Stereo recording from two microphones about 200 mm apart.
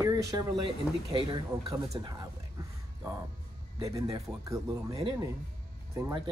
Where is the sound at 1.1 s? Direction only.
25° right (ahead or behind).